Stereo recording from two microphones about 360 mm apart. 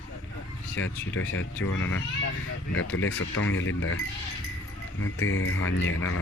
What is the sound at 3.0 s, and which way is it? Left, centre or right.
Speech, left.